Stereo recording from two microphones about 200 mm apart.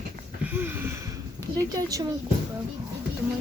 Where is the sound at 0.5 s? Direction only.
10° right (ahead or behind).